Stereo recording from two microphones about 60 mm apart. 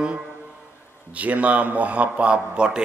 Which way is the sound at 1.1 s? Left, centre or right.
Right.